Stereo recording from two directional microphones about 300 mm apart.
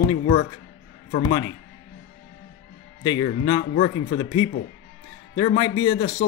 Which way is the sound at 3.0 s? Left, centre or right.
Centre.